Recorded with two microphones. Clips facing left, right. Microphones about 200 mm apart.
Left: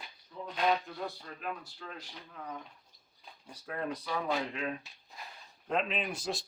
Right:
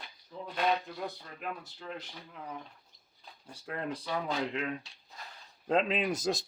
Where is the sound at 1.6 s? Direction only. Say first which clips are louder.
Right 4 dB; 20° right (ahead or behind).